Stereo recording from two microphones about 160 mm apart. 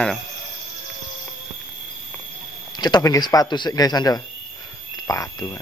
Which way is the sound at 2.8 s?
25° left (ahead or behind).